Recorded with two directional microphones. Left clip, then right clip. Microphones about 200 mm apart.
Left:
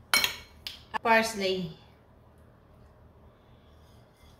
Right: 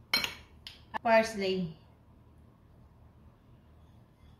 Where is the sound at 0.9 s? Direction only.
20° left (ahead or behind).